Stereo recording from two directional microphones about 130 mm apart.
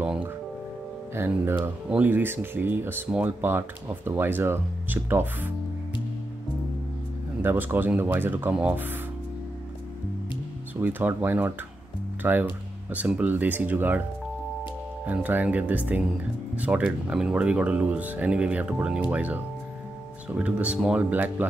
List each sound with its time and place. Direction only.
1.1 s speech: 15° right (ahead or behind)
7.4 s speech: 15° right (ahead or behind)
10.8 s speech: 15° right (ahead or behind)
15.0 s speech: 15° right (ahead or behind)